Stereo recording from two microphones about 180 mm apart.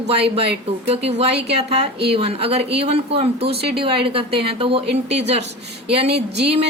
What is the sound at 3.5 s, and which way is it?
Speech, 65° right (ahead or behind).